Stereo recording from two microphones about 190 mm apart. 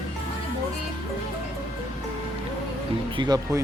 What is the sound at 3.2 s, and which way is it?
Speech, 20° right (ahead or behind).